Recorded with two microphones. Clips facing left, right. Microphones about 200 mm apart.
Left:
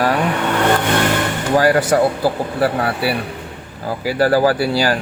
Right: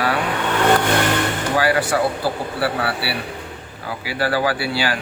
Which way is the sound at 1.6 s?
45° left (ahead or behind).